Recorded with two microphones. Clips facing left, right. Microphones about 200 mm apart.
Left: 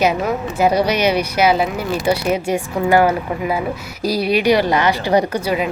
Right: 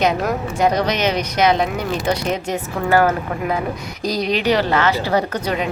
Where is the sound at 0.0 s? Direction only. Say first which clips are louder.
Left 1 dB; 5° left (ahead or behind).